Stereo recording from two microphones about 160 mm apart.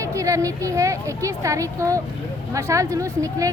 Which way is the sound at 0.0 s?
20° right (ahead or behind).